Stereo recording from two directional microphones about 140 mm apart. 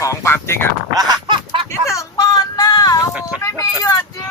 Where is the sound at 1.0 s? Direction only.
35° right (ahead or behind).